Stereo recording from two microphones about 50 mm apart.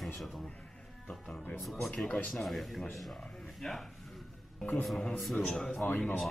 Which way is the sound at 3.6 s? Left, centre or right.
Centre.